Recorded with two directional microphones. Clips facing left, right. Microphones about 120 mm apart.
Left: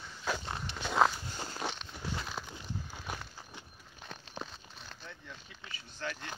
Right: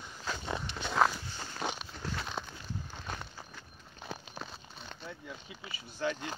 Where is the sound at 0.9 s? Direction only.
15° left (ahead or behind).